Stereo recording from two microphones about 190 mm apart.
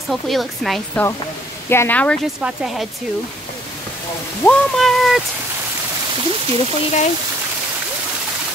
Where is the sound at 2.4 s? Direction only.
5° right (ahead or behind).